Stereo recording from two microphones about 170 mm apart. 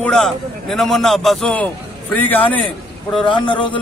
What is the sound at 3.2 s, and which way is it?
Speech, 30° left (ahead or behind).